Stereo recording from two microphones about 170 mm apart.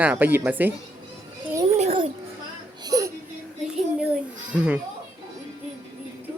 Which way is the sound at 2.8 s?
20° right (ahead or behind).